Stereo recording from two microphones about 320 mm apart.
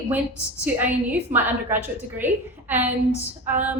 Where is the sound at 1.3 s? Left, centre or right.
Centre.